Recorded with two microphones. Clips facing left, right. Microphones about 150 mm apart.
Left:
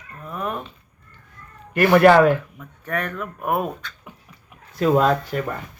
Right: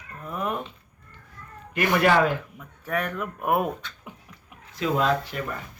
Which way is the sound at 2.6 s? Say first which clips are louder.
Left 1 dB; 10° right (ahead or behind).